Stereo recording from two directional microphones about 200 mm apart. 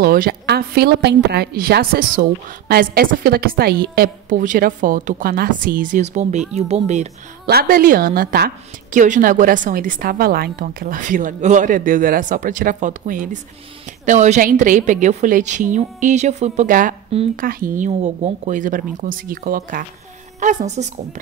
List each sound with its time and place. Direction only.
0.0 s a woman's voice: 45° right (ahead or behind)
7.4 s a woman's voice: 50° right (ahead or behind)